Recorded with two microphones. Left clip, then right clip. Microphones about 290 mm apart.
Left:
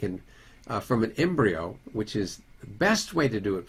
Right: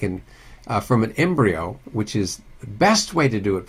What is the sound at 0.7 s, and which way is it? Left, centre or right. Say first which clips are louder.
Speech: right 7 dB; right.